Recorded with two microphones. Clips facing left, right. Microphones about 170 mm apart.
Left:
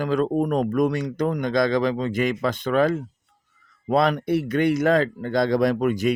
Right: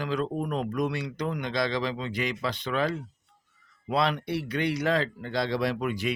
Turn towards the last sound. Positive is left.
turn(degrees=45)  # may be behind; listen again after turning